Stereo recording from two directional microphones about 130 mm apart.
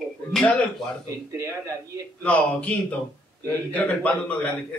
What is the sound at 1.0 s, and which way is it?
Speech, 25° right (ahead or behind).